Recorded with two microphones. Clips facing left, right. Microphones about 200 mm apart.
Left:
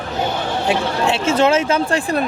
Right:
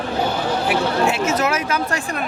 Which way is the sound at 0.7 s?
30° left (ahead or behind).